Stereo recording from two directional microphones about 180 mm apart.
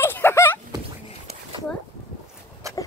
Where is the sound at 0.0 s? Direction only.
15° left (ahead or behind).